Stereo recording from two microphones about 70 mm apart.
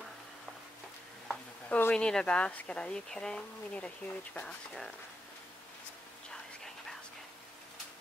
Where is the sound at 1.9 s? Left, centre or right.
Centre.